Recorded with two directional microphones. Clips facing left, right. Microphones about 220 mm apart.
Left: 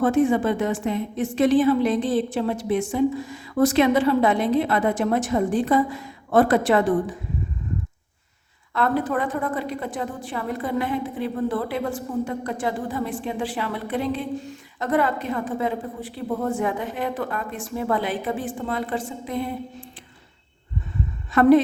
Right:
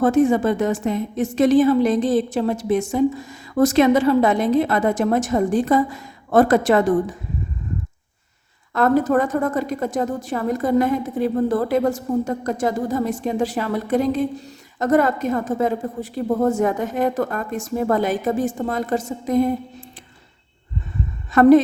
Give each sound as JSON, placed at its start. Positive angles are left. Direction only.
{"t": 0.0, "sound": "a woman's voice", "side_deg": -40}
{"t": 8.7, "sound": "a woman's voice", "side_deg": -45}
{"t": 21.3, "sound": "a woman's voice", "side_deg": -45}